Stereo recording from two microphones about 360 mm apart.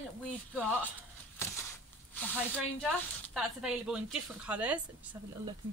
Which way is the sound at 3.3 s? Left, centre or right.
Centre.